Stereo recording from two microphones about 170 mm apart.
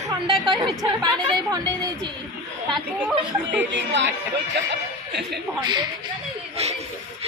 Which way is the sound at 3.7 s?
90° right.